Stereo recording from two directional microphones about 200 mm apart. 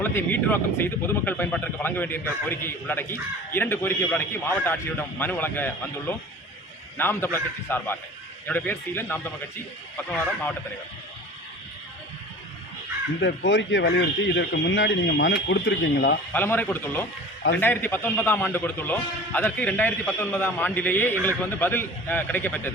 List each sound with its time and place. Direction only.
0.0 s speech: 10° left (ahead or behind)
13.2 s speech: 65° left (ahead or behind)
16.3 s speech: 10° left (ahead or behind)